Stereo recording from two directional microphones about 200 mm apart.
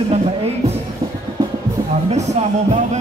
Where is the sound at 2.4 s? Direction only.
35° right (ahead or behind).